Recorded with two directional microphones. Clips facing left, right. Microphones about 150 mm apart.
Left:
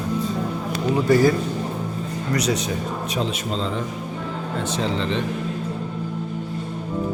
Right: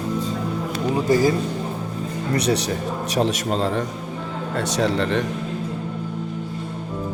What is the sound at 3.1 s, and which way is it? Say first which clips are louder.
Speech: right 6 dB; 60° right (ahead or behind).